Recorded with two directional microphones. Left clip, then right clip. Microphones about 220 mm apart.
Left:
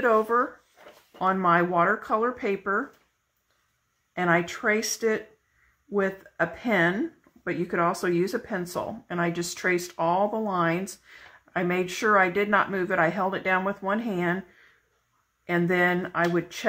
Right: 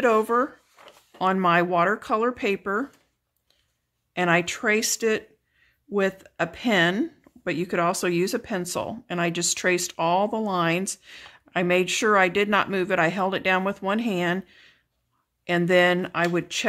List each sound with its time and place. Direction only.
0.0 s speech: 55° right (ahead or behind)
4.2 s speech: 55° right (ahead or behind)
6.3 s speech: 55° right (ahead or behind)
15.4 s speech: 55° right (ahead or behind)